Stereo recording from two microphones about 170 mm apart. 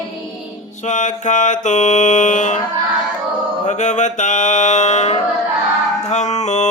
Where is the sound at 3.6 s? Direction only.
45° left (ahead or behind).